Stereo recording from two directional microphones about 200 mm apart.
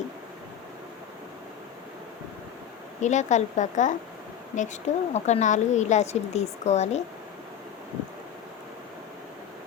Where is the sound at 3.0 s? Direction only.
35° left (ahead or behind).